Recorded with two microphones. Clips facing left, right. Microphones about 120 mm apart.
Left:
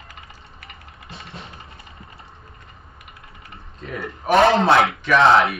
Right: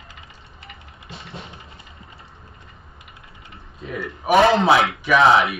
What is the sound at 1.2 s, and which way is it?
Vehicle, centre (ahead or behind).